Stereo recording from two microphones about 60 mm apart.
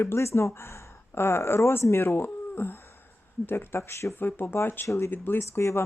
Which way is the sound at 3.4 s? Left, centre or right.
Left.